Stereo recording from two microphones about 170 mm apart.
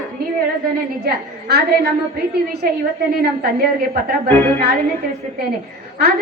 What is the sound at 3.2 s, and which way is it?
Speech, 65° right (ahead or behind).